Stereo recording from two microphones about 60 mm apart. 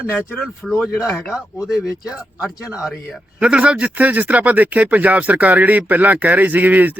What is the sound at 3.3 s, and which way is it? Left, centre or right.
Speech, centre.